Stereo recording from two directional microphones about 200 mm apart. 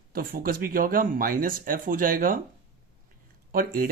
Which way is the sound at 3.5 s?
45° right (ahead or behind).